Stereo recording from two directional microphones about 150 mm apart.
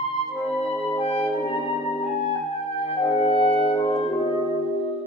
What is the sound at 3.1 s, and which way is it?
Music, 40° left (ahead or behind).